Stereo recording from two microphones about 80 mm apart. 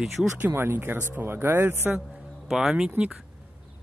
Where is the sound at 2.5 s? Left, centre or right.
Centre.